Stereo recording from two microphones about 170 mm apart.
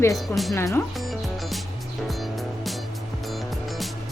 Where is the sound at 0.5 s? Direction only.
15° left (ahead or behind).